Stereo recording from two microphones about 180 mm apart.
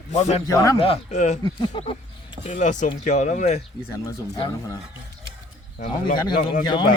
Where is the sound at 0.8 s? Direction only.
35° left (ahead or behind).